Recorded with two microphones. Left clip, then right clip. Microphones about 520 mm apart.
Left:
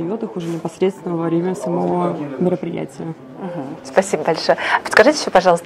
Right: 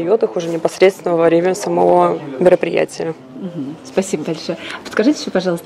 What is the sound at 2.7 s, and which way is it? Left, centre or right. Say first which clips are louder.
Speech: right 10 dB; right.